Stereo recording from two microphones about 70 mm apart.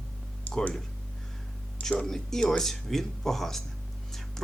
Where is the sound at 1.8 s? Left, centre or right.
Centre.